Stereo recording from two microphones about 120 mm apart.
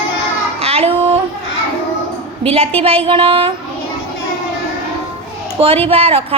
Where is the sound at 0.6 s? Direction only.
60° right (ahead or behind).